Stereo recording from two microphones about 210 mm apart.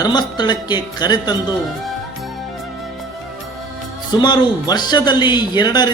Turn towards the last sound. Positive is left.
turn(degrees=20)  # may be behind; listen again after turning